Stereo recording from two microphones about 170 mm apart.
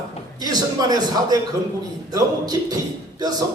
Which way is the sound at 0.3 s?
25° right (ahead or behind).